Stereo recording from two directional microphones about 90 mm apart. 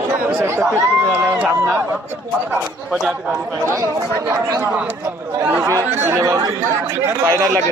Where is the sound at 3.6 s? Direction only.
30° right (ahead or behind).